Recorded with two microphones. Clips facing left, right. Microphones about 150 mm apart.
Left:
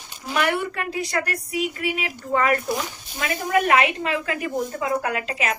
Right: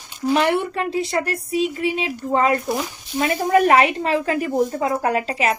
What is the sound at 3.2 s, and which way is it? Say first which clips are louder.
A woman's voice: right 5 dB; 40° right (ahead or behind).